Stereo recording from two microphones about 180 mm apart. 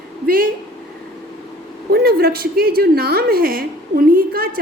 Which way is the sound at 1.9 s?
60° right (ahead or behind).